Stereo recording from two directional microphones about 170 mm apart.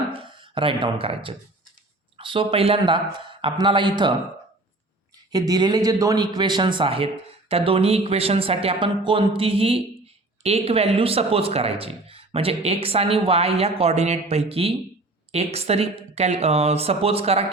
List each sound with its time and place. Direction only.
0.1 s speech: 30° right (ahead or behind)
5.3 s a man's voice: 25° right (ahead or behind)